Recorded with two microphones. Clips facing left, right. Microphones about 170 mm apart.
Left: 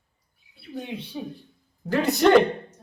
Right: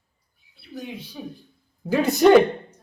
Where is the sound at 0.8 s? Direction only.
25° left (ahead or behind).